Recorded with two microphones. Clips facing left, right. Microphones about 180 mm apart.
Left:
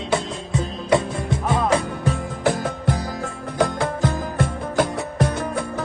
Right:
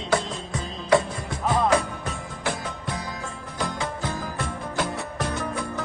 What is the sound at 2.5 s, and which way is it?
Music, 60° left (ahead or behind).